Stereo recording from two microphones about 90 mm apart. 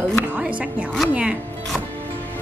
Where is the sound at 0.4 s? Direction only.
10° right (ahead or behind).